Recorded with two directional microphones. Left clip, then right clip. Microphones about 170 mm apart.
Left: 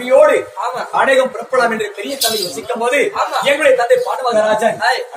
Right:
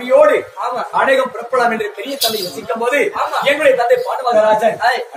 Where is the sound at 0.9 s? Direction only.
15° left (ahead or behind).